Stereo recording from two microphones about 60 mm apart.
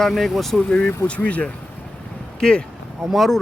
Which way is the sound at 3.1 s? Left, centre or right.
Centre.